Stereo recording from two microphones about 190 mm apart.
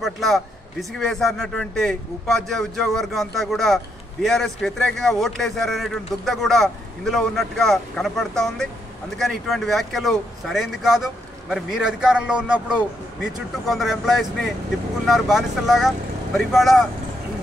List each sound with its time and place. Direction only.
0.0 s speech: centre (ahead or behind)